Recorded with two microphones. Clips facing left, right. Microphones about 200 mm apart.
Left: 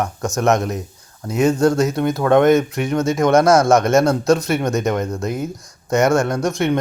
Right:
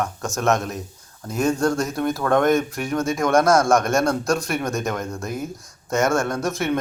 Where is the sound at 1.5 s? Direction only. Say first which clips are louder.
Left 6 dB; 20° left (ahead or behind).